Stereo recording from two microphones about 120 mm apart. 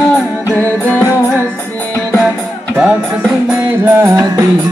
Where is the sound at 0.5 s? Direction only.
15° left (ahead or behind).